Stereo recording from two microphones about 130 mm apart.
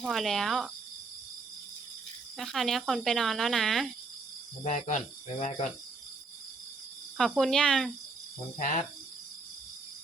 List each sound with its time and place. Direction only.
0.0 s speech: centre (ahead or behind)
2.4 s speech: centre (ahead or behind)
4.6 s speech: 65° left (ahead or behind)
7.2 s speech: centre (ahead or behind)
8.5 s cricket: 90° left